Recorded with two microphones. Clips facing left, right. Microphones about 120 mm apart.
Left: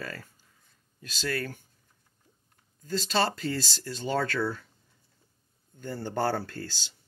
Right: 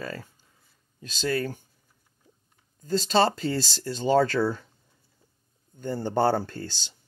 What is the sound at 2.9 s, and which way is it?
Speech, 30° right (ahead or behind).